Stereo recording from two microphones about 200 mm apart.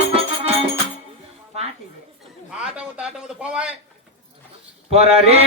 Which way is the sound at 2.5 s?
5° right (ahead or behind).